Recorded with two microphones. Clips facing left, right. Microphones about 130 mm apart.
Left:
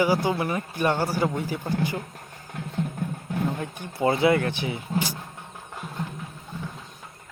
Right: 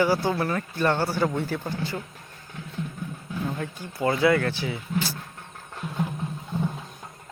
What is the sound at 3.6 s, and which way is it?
Speech, 25° left (ahead or behind).